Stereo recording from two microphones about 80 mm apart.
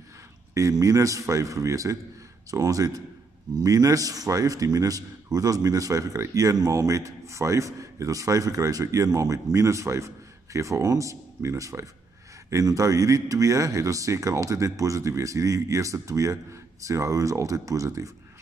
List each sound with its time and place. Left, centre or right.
0.6 s speech: right